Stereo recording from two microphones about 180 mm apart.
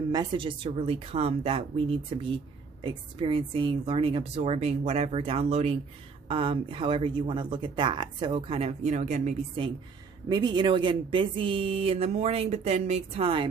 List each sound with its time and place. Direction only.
0.1 s speech: 25° right (ahead or behind); by 9.7 s 40° right (ahead or behind)
10.2 s speech: 25° right (ahead or behind)